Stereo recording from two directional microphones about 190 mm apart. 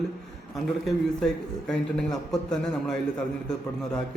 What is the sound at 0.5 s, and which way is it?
A man's voice, centre (ahead or behind).